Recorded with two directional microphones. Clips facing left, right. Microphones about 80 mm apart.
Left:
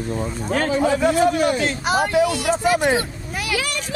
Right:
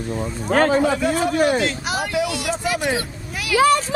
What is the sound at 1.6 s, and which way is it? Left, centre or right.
Speech, left.